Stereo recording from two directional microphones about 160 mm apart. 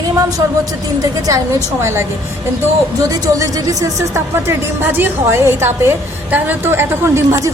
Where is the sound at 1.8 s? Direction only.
15° right (ahead or behind).